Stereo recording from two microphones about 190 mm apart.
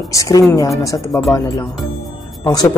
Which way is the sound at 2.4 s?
20° left (ahead or behind).